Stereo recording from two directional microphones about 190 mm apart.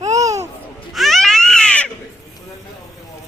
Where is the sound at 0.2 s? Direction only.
15° right (ahead or behind).